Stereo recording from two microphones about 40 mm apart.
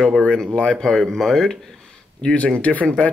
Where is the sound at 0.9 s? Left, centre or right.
Centre.